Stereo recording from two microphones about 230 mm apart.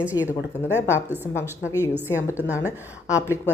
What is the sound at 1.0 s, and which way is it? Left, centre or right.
Speech, centre.